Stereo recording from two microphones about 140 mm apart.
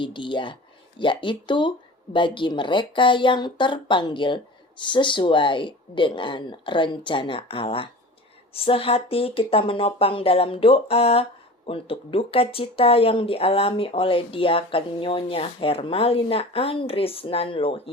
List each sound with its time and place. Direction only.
0.0 s speech: 35° left (ahead or behind)